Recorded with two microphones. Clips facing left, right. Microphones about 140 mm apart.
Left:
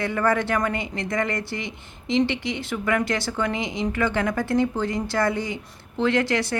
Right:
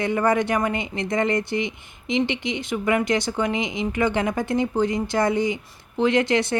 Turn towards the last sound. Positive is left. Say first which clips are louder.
# right 2 dB
turn(degrees=-20)  # may be behind; listen again after turning